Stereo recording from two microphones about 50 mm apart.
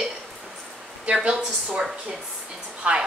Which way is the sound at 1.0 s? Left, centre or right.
Centre.